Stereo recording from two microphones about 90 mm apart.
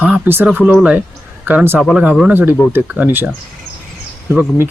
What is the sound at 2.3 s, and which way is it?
Speech, 20° right (ahead or behind).